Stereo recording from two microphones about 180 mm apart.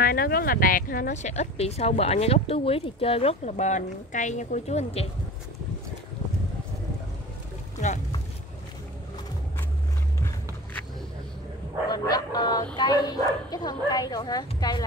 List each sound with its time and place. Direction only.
0.0 s speech: 55° left (ahead or behind); by 5.0 s 35° left (ahead or behind)
7.7 s boat: 40° left (ahead or behind)
11.9 s chicken: 20° left (ahead or behind)
12.7 s speech: 25° left (ahead or behind)